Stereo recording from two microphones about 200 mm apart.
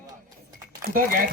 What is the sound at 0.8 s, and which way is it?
Speech, 45° right (ahead or behind).